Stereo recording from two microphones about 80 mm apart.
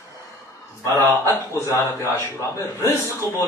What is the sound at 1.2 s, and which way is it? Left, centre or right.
A man's voice, left.